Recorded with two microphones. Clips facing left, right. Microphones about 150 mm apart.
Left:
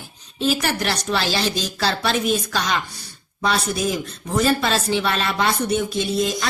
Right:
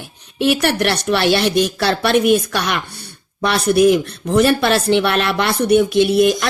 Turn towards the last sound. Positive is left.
turn(degrees=-65)  # may be behind; listen again after turning